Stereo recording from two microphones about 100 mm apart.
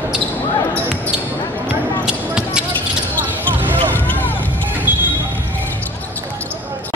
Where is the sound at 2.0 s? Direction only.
10° right (ahead or behind).